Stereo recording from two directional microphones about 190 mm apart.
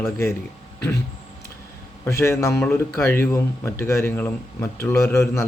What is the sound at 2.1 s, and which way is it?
A man's voice, 15° left (ahead or behind).